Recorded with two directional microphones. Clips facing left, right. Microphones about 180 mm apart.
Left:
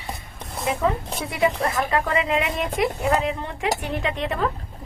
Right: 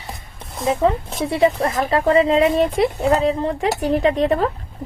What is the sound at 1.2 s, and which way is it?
Speech, 30° right (ahead or behind).